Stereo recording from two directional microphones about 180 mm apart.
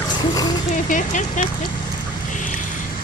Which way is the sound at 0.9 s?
45° left (ahead or behind).